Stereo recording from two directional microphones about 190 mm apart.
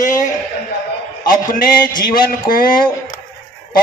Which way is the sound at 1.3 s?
50° left (ahead or behind).